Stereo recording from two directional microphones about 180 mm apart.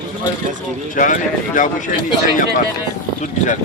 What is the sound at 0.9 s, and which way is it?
Speech, 50° left (ahead or behind).